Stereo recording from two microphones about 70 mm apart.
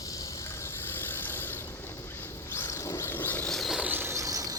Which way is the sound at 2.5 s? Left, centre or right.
Left.